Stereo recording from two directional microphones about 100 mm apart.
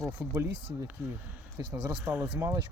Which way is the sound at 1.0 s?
25° right (ahead or behind).